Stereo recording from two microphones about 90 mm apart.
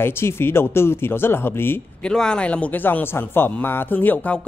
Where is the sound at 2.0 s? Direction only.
10° left (ahead or behind).